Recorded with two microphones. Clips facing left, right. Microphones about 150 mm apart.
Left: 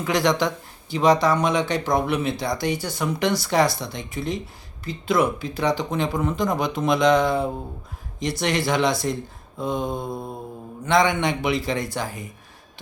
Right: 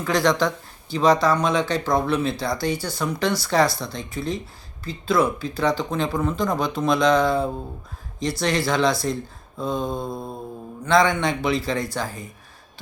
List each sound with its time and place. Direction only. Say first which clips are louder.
0.0 s speech: right 1 dB; 20° left (ahead or behind)